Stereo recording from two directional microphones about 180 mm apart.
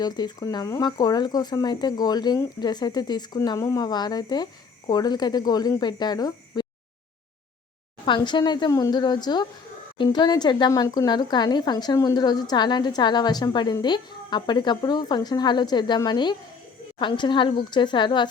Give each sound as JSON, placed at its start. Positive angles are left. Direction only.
{"t": 0.0, "sound": "speech", "side_deg": 25}
{"t": 8.0, "sound": "speech", "side_deg": 25}